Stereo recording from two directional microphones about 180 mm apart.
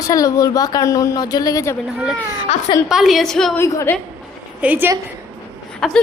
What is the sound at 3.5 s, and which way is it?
Speech, 15° left (ahead or behind).